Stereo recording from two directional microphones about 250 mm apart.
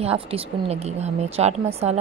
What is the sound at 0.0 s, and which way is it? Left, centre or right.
A woman's voice, right.